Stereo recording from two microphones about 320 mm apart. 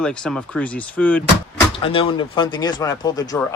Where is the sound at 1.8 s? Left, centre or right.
Centre.